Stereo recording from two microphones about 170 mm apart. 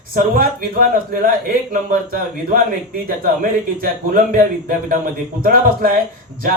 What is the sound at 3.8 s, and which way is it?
Speech, 55° right (ahead or behind).